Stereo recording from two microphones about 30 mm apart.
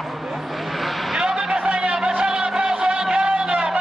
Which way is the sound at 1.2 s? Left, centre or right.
Right.